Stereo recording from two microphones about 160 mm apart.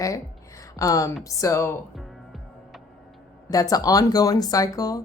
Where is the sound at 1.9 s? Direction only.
Centre (ahead or behind).